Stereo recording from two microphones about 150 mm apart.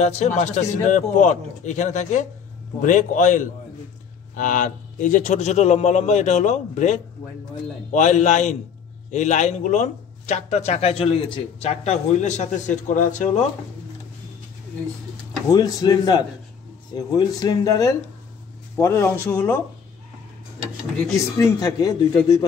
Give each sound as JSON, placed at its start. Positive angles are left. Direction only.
{"t": 0.0, "sound": "speech", "side_deg": 50}
{"t": 15.5, "sound": "speech", "side_deg": 25}
{"t": 21.2, "sound": "speech", "side_deg": 25}